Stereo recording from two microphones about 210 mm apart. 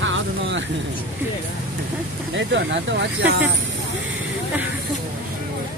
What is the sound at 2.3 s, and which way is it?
Speech, 55° right (ahead or behind).